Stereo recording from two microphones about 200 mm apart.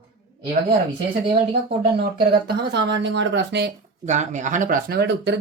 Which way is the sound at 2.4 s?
60° right (ahead or behind).